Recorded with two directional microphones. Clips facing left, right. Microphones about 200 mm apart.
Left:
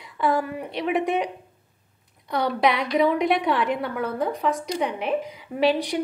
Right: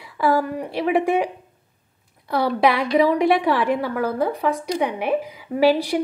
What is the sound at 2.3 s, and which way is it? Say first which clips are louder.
A woman's voice: right 3 dB; 5° right (ahead or behind).